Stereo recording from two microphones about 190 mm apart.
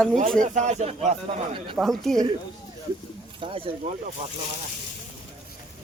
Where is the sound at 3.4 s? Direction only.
30° right (ahead or behind).